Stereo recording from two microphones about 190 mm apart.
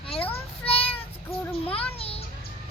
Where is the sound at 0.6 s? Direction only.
30° left (ahead or behind).